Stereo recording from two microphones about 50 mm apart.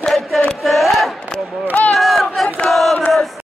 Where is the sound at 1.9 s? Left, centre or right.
Centre.